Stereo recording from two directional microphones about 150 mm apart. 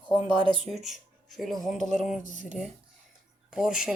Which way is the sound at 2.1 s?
60° left (ahead or behind).